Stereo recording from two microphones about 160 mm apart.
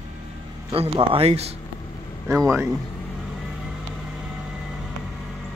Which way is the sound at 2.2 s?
20° right (ahead or behind).